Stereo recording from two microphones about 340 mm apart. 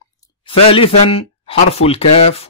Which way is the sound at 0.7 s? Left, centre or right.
Centre.